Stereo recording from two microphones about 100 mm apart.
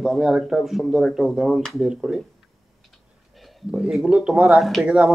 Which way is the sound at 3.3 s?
Centre (ahead or behind).